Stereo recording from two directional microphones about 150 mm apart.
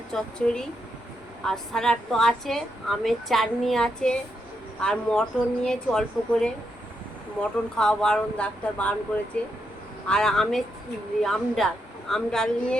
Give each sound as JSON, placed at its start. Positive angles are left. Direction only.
{"t": 0.1, "sound": "a woman's voice", "side_deg": 5}